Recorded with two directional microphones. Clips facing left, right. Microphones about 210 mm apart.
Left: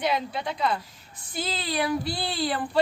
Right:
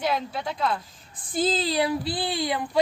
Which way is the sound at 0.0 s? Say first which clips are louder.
Even; centre (ahead or behind).